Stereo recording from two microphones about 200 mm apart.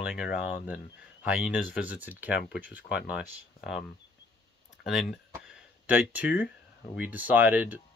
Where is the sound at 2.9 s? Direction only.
55° left (ahead or behind).